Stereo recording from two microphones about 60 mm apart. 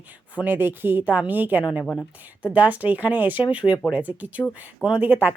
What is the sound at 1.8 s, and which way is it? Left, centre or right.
Speech, left.